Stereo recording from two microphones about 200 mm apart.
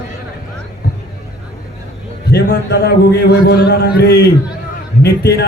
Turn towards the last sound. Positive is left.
turn(degrees=55)  # may be behind; listen again after turning